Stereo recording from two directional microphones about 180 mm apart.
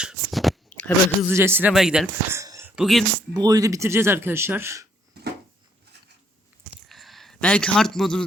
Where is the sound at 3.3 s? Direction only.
20° right (ahead or behind).